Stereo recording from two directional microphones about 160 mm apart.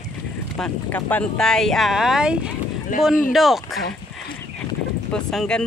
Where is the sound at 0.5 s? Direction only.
5° left (ahead or behind).